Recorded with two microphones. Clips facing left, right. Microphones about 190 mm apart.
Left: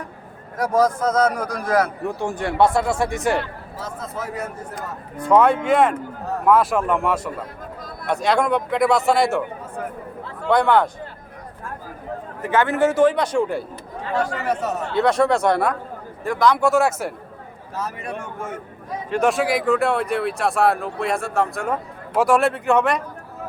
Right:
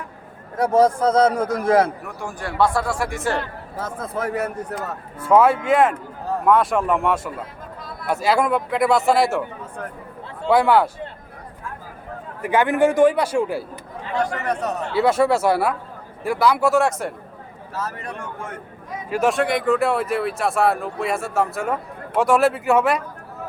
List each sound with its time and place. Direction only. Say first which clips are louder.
0.5 s a man's voice: right 2 dB; 30° right (ahead or behind)
2.0 s speech: left 6 dB; 25° left (ahead or behind)
3.8 s a man's voice: right 4 dB; 55° right (ahead or behind)
5.2 s speech: even; 5° right (ahead or behind)
12.4 s a man's voice: right 1 dB; 15° right (ahead or behind)
14.1 s speech: left 1 dB; 5° left (ahead or behind)
19.1 s speech: even; centre (ahead or behind)